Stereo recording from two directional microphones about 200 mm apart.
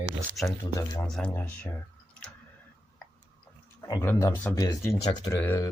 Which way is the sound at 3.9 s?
15° left (ahead or behind).